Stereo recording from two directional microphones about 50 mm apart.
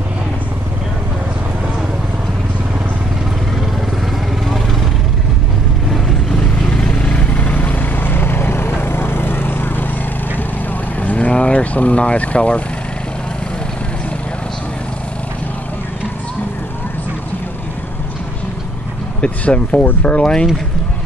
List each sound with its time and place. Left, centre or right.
5.9 s vehicle: centre
6.3 s vehicle: centre; by 9.8 s left
11.0 s vehicle: left
19.2 s speech: left